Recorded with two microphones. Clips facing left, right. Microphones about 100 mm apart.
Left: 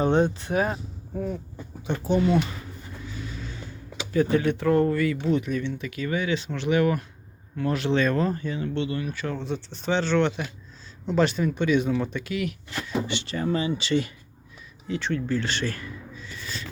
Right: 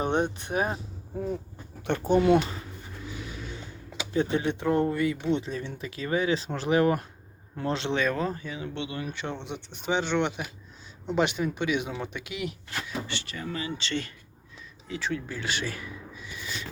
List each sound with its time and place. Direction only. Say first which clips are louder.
0.0 s speech: left 5 dB; 20° right (ahead or behind)
1.9 s speech: right 1 dB; 55° right (ahead or behind)
4.1 s speech: left 4 dB; 25° right (ahead or behind)
7.9 s speech: left 4 dB; 5° right (ahead or behind); by 12.5 s 20° right (ahead or behind)
13.2 s speech: left 8 dB; 35° left (ahead or behind)
13.7 s speech: left 7 dB; 10° left (ahead or behind)
14.8 s speech: left 5 dB; 5° right (ahead or behind)